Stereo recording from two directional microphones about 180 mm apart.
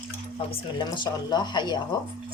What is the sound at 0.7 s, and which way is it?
Speech, 25° left (ahead or behind).